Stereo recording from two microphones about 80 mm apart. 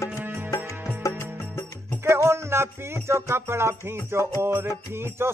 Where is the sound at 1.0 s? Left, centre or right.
Left.